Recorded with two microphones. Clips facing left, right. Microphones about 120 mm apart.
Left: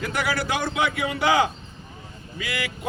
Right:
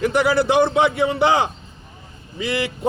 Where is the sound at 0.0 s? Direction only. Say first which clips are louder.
Right 9 dB; 25° right (ahead or behind).